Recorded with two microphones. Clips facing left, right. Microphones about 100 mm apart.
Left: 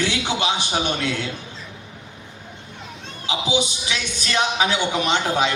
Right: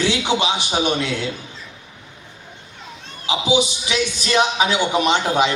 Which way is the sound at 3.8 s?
20° right (ahead or behind).